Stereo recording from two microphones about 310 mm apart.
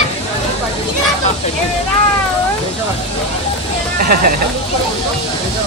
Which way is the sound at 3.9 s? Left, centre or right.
Right.